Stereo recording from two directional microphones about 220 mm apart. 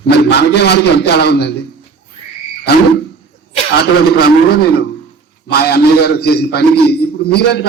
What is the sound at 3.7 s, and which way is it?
A man's voice, 45° left (ahead or behind).